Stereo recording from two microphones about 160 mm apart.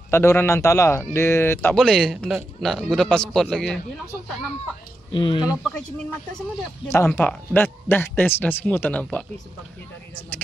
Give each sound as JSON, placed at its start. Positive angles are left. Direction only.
{"t": 0.1, "sound": "speech", "side_deg": 15}
{"t": 1.8, "sound": "a man's voice", "side_deg": 0}
{"t": 5.1, "sound": "speech", "side_deg": 30}
{"t": 5.6, "sound": "a man's voice", "side_deg": 5}
{"t": 7.1, "sound": "speech", "side_deg": 10}